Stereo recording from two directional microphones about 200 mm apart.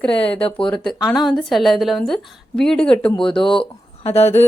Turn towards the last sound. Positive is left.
turn(degrees=30)  # may be behind; listen again after turning